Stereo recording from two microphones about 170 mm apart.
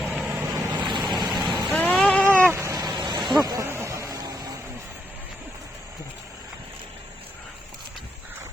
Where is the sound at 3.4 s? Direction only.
20° right (ahead or behind).